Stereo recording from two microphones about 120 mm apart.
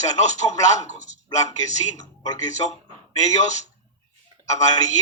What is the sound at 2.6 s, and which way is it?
Speech, 55° left (ahead or behind).